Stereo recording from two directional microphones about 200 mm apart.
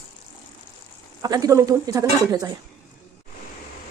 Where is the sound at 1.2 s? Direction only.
20° right (ahead or behind).